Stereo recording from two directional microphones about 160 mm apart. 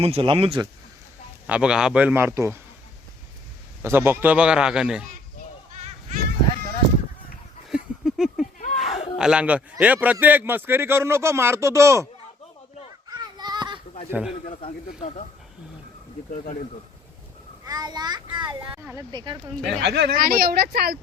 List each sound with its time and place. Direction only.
0.0 s speech: 35° right (ahead or behind)
1.5 s a man's voice: 5° right (ahead or behind)
3.8 s a man's voice: 15° right (ahead or behind)
5.7 s a sound: 45° right (ahead or behind)
7.7 s a sound: 5° right (ahead or behind)
8.5 s a sound: 50° left (ahead or behind)
9.1 s a man's voice: 5° right (ahead or behind)
13.1 s a sound: 25° right (ahead or behind)
14.1 s a man's voice: 10° right (ahead or behind)
14.4 s speech: 45° left (ahead or behind)
17.7 s a child's voice: 25° right (ahead or behind)
19.4 s speech: 5° left (ahead or behind)
19.8 s speech: 90° right